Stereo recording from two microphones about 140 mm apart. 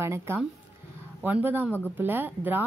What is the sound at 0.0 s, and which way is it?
Speech, 15° right (ahead or behind).